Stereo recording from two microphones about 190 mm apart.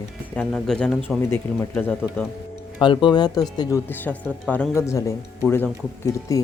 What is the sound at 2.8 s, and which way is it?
Speech, 25° left (ahead or behind).